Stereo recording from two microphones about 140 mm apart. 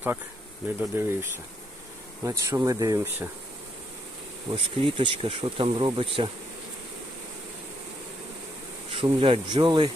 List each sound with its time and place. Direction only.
0.8 s speech: 15° right (ahead or behind)
3.0 s speech: 15° right (ahead or behind)
4.5 s speech: 35° right (ahead or behind)
8.9 s speech: 40° right (ahead or behind)